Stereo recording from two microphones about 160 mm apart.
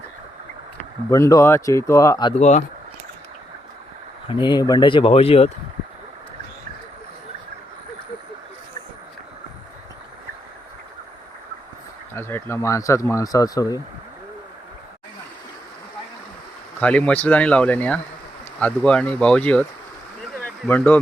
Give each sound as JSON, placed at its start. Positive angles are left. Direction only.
{"t": 1.1, "sound": "speech", "side_deg": 20}
{"t": 2.3, "sound": "speech", "side_deg": 45}
{"t": 4.3, "sound": "speech", "side_deg": 30}
{"t": 12.1, "sound": "speech", "side_deg": 15}
{"t": 16.8, "sound": "speech", "side_deg": 10}
{"t": 20.4, "sound": "a sound", "side_deg": 10}